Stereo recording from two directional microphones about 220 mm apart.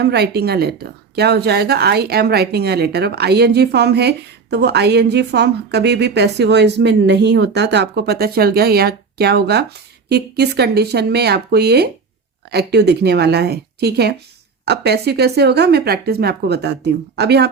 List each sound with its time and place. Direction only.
0.0 s speech: 50° right (ahead or behind)